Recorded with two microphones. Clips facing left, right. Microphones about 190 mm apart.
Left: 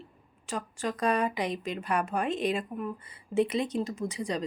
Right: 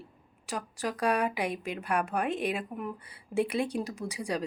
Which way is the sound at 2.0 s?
60° right (ahead or behind).